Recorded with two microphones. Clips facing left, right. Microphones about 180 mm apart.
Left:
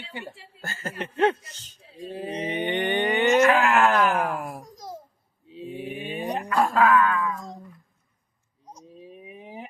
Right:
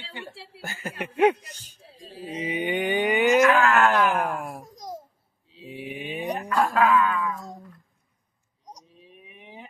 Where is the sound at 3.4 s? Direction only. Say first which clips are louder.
Even; 30° left (ahead or behind).